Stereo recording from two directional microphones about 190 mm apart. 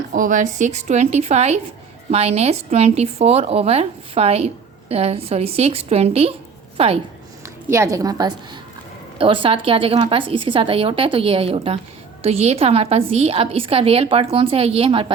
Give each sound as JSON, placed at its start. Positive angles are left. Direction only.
{"t": 0.1, "sound": "a woman's voice", "side_deg": -45}
{"t": 7.4, "sound": "a woman's voice", "side_deg": -15}